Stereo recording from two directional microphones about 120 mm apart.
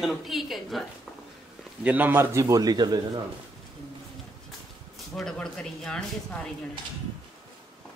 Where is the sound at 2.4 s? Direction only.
30° right (ahead or behind).